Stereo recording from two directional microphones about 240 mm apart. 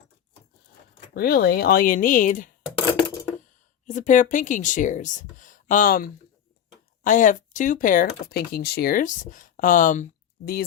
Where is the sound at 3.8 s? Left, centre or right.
Left.